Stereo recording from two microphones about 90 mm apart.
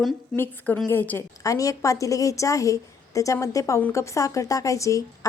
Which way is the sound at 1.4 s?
40° left (ahead or behind).